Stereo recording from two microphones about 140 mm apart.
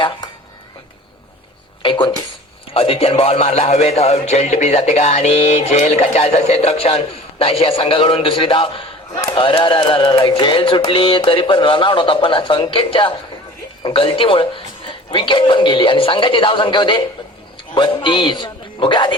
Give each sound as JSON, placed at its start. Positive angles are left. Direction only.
{"t": 1.8, "sound": "a sound", "side_deg": 35}
{"t": 2.7, "sound": "speech", "side_deg": 45}
{"t": 9.3, "sound": "music", "side_deg": 35}
{"t": 17.7, "sound": "a man's voice", "side_deg": 35}